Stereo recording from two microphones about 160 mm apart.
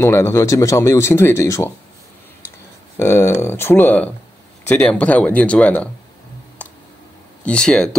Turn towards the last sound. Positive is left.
turn(degrees=5)  # may be behind; listen again after turning